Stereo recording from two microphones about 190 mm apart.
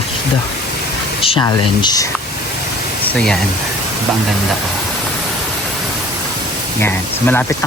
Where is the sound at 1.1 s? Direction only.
30° left (ahead or behind).